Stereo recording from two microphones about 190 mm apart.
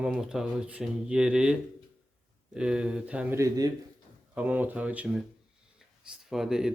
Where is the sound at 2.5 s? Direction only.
5° right (ahead or behind).